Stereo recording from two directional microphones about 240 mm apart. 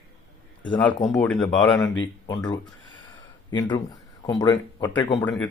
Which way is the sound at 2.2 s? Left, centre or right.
Centre.